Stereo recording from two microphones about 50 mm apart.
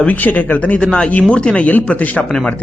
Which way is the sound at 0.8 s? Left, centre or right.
Centre.